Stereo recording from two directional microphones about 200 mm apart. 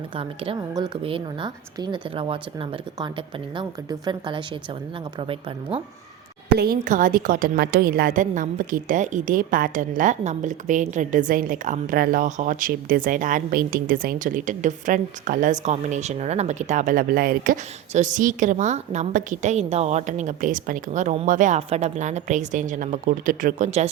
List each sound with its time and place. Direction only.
0.2 s a woman's voice: 25° right (ahead or behind)
6.6 s a woman's voice: 45° right (ahead or behind)